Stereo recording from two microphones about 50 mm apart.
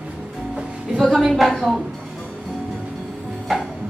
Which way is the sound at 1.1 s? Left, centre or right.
Centre.